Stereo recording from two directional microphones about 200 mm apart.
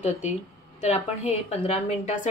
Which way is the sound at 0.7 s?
35° left (ahead or behind).